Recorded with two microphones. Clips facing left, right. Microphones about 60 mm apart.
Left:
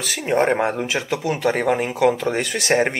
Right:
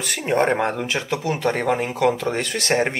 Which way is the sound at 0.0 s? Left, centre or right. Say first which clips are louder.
Left 1 dB; centre.